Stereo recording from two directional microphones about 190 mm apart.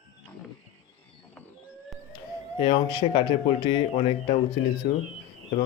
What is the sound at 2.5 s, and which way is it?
Speech, 25° left (ahead or behind).